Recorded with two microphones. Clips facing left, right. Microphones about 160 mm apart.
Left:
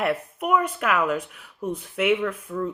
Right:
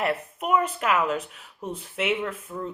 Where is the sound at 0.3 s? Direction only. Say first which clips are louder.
Even; 30° right (ahead or behind).